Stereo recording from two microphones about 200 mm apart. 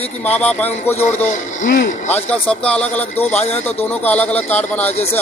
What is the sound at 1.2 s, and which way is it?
Speech, 40° left (ahead or behind).